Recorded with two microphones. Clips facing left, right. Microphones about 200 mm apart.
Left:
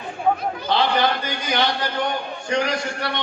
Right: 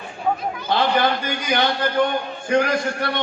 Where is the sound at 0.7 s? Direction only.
50° right (ahead or behind).